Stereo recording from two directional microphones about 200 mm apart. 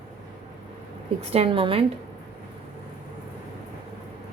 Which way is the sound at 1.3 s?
30° right (ahead or behind).